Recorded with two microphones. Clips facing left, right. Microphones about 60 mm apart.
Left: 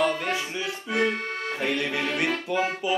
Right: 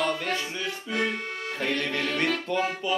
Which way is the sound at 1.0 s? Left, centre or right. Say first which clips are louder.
Left 4 dB; left.